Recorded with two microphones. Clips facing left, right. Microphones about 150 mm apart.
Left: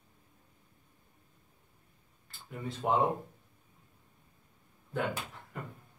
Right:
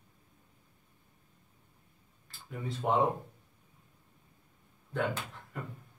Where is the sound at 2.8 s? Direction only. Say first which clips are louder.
Even; 5° left (ahead or behind).